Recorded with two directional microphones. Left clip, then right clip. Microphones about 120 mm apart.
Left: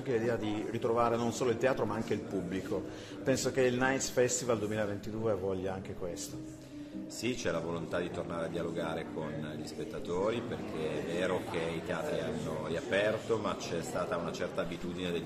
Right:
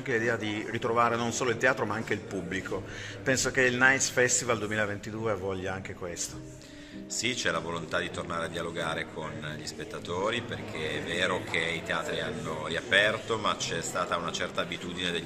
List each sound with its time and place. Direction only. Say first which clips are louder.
0.1 s speech: right 4 dB; 15° right (ahead or behind)
7.2 s speech: right 5 dB; 25° left (ahead or behind)
10.0 s speech: right 3 dB; 25° left (ahead or behind)